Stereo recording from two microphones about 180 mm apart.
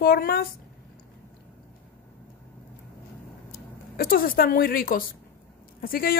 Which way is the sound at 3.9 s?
55° left (ahead or behind).